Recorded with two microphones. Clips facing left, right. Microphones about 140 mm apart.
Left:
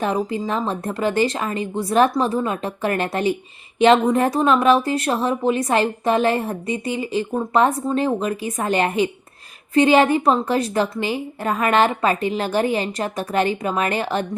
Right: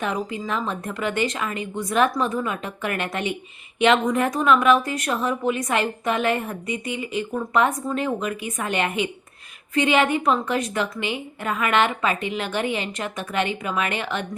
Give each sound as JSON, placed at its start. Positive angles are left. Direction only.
{"t": 0.0, "sound": "speech", "side_deg": 35}